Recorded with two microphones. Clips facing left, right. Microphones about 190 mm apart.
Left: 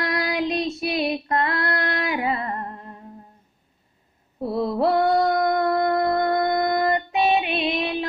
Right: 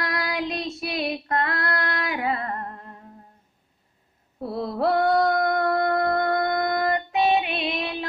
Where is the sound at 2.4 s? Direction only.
15° left (ahead or behind).